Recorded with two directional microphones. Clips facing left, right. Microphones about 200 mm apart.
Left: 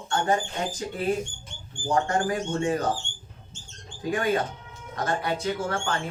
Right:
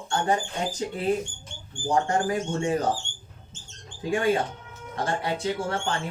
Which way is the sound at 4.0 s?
25° right (ahead or behind).